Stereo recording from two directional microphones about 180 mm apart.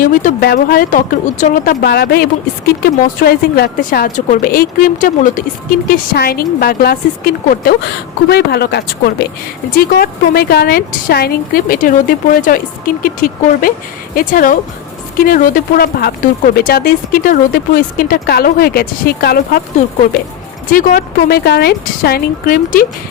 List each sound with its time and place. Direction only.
0.0 s a woman's voice: 45° left (ahead or behind)
1.8 s a woman's voice: 60° left (ahead or behind)
20.7 s speech: 55° left (ahead or behind)